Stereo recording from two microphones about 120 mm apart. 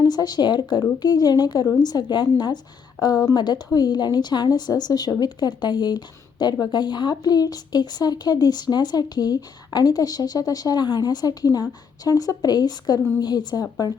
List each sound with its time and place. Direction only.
0.0 s speech: 35° left (ahead or behind)